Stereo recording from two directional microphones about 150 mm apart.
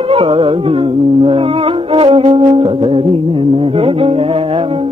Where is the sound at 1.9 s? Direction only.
40° right (ahead or behind).